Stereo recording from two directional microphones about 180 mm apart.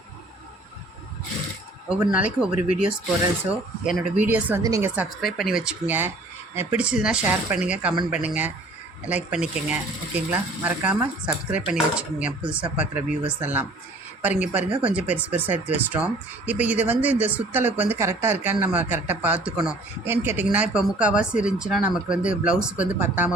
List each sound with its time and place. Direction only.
1.9 s speech: 5° right (ahead or behind)
4.2 s speech: 10° right (ahead or behind)
5.2 s speech: centre (ahead or behind)